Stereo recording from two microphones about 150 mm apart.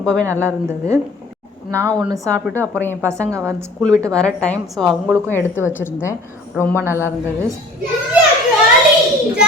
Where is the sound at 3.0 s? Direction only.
20° right (ahead or behind).